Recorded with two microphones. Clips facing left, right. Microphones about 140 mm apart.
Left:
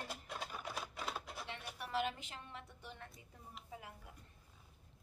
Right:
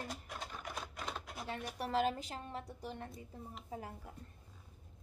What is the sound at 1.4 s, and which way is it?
A woman's voice, 40° right (ahead or behind).